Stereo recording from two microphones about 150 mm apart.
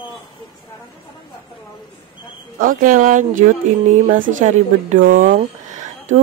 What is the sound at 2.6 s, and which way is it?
Speech, 70° right (ahead or behind).